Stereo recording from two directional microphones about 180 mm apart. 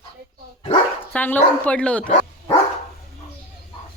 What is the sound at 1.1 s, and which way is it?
Speech, 10° left (ahead or behind).